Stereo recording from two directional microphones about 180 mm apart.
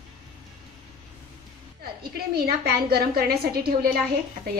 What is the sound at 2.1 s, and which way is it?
A woman's voice, 60° right (ahead or behind).